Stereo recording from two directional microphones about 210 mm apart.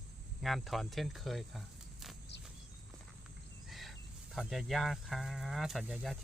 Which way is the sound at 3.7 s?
Centre (ahead or behind).